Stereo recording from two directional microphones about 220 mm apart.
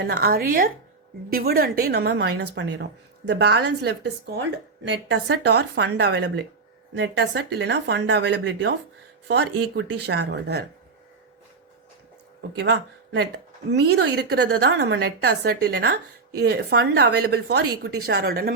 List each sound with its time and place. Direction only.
0.0 s a woman's voice: 45° right (ahead or behind)
2.3 s speech: 90° right
2.6 s a woman's voice: 50° right (ahead or behind)
12.4 s speech: 50° right (ahead or behind)
13.9 s a woman's voice: 50° right (ahead or behind)